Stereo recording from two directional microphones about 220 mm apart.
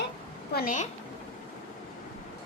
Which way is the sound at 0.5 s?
35° left (ahead or behind).